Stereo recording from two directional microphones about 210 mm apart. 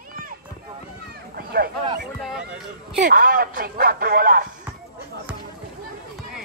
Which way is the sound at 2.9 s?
40° right (ahead or behind).